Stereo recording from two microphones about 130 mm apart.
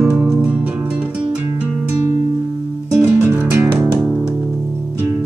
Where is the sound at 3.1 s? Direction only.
15° right (ahead or behind).